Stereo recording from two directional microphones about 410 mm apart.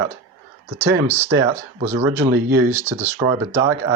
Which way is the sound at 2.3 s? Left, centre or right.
Right.